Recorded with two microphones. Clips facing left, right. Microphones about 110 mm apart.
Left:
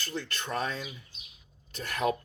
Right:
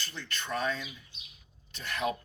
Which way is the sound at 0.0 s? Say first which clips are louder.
Left 4 dB; 45° left (ahead or behind).